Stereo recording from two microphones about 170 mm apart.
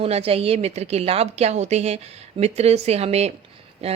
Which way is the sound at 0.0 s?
35° right (ahead or behind).